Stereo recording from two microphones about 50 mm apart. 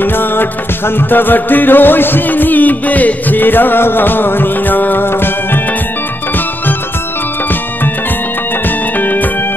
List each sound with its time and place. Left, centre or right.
0.0 s music: left
8.6 s music: left